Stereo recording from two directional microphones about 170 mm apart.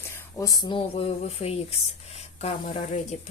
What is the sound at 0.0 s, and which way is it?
Speech, 20° left (ahead or behind).